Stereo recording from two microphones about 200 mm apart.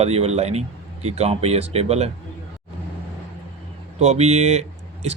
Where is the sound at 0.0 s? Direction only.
30° right (ahead or behind).